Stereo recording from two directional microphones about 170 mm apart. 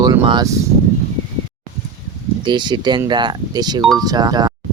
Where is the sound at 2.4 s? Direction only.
25° right (ahead or behind).